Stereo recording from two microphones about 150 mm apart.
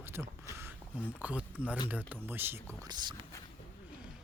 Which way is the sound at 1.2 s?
10° right (ahead or behind).